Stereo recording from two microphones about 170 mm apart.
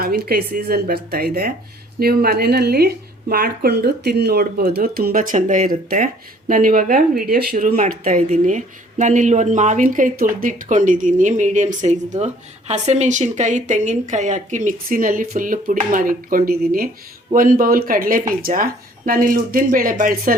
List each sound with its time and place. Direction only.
0.0 s speech: 60° right (ahead or behind)